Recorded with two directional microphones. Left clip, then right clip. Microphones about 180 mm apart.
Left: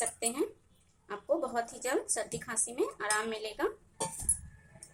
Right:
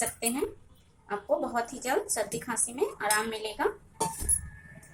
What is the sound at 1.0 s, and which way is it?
A woman's voice, 45° left (ahead or behind).